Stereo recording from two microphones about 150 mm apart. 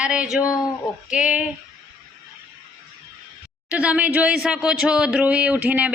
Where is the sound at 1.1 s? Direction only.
10° right (ahead or behind).